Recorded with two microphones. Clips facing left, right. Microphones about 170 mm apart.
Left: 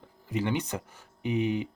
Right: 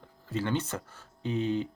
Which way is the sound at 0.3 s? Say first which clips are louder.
Left 1 dB; 15° left (ahead or behind).